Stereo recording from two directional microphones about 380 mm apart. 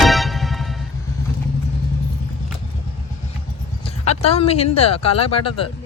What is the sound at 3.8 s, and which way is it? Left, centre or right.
Speech, centre.